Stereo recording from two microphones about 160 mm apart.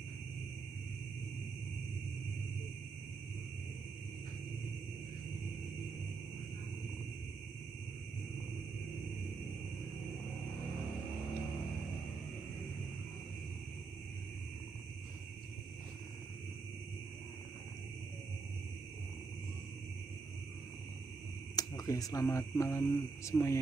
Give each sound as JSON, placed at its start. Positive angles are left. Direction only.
{"t": 21.5, "sound": "speech", "side_deg": 25}